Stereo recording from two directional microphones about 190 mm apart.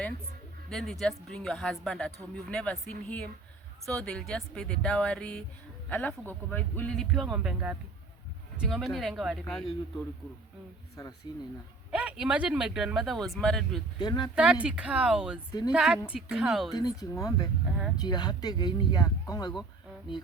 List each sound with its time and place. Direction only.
0.7 s speech: centre (ahead or behind)
11.0 s speech: 20° left (ahead or behind)
11.9 s speech: 5° right (ahead or behind)
14.0 s speech: 25° left (ahead or behind)
14.3 s speech: 5° right (ahead or behind)
16.7 s speech: 20° left (ahead or behind)